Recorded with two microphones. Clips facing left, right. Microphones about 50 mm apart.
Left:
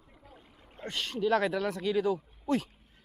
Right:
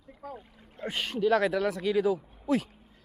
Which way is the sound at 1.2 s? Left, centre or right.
Centre.